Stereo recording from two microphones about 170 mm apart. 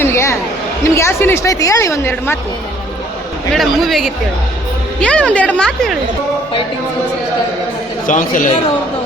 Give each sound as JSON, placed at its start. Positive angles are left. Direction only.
{"t": 0.0, "sound": "a sound", "side_deg": 15}
{"t": 0.9, "sound": "a woman's voice", "side_deg": 15}
{"t": 3.5, "sound": "a man's voice", "side_deg": 0}
{"t": 8.0, "sound": "speech", "side_deg": 50}